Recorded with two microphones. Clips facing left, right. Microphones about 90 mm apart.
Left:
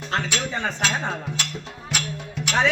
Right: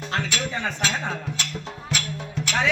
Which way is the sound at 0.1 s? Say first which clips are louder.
Left 2 dB; 35° left (ahead or behind).